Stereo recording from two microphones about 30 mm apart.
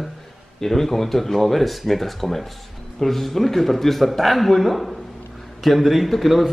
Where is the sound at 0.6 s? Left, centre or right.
Centre.